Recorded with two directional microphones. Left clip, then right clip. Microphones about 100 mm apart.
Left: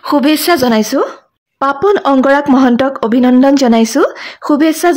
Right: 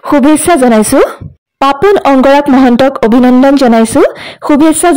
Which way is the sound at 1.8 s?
45° right (ahead or behind).